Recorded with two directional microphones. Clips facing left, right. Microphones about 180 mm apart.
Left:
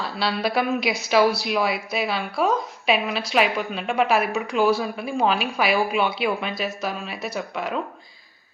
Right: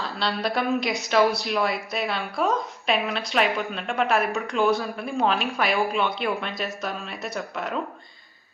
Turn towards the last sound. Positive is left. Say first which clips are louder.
# left 2 dB
turn(degrees=0)  # may be behind; listen again after turning